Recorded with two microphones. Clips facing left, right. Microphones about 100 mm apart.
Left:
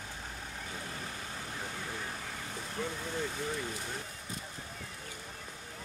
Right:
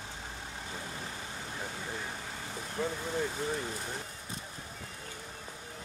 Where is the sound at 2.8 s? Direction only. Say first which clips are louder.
Right 4 dB; 40° right (ahead or behind).